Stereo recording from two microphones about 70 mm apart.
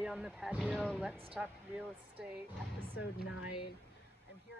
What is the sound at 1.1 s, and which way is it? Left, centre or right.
Speech, right.